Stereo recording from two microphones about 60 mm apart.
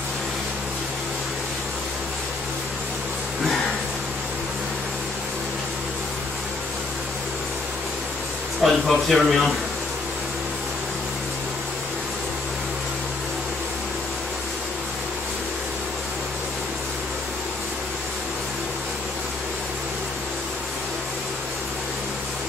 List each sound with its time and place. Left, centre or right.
8.6 s speech: centre